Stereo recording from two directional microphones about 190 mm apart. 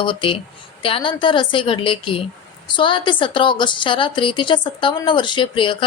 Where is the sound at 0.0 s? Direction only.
25° left (ahead or behind).